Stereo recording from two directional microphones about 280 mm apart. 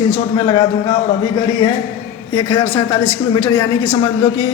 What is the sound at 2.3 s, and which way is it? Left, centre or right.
A man's voice, centre.